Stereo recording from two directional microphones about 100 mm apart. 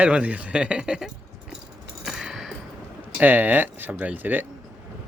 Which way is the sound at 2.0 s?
5° right (ahead or behind).